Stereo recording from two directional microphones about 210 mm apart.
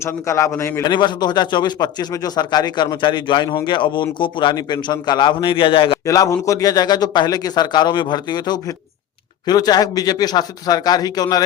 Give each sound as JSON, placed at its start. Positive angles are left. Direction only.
{"t": 0.0, "sound": "a man's voice", "side_deg": 15}